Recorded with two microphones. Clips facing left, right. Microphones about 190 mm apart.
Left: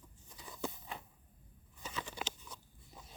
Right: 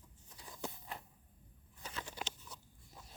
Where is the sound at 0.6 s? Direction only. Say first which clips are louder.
Left 3 dB; centre (ahead or behind).